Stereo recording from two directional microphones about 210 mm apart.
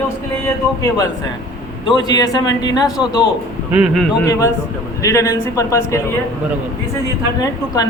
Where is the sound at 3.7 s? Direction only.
Centre (ahead or behind).